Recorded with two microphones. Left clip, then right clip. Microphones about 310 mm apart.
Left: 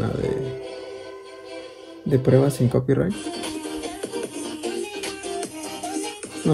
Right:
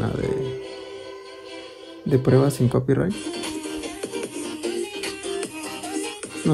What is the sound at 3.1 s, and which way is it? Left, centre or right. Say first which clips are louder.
Music: even; centre.